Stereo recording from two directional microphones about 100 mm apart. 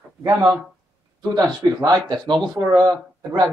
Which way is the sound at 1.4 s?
45° right (ahead or behind).